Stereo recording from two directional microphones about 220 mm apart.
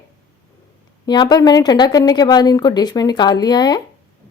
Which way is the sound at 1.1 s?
20° left (ahead or behind).